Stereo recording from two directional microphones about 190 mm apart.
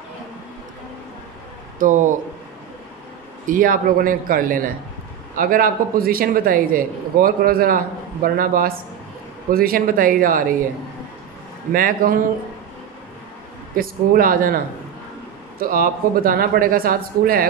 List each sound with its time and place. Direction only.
1.8 s a man's voice: 45° right (ahead or behind)
3.4 s a man's voice: 45° right (ahead or behind)
11.7 s a man's voice: 50° right (ahead or behind)
13.7 s a man's voice: 50° right (ahead or behind)
15.6 s a man's voice: 50° right (ahead or behind)